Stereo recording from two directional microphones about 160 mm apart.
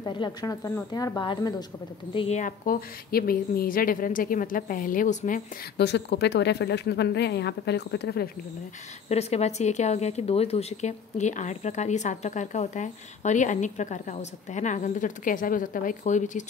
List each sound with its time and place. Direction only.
0.0 s speech: 30° left (ahead or behind)
2.1 s speech: 45° left (ahead or behind)
5.8 s speech: 90° left
9.1 s speech: 40° left (ahead or behind)